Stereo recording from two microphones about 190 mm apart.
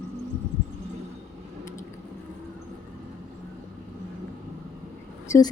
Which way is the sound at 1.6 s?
15° left (ahead or behind).